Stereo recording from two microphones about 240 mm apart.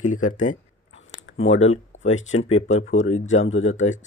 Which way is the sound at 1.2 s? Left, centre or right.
Left.